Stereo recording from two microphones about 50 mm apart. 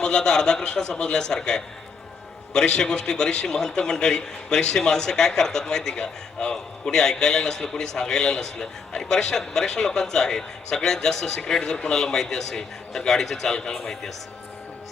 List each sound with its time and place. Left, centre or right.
0.0 s a man's voice: centre